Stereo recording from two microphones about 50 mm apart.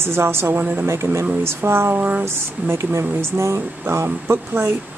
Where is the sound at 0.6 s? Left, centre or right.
Right.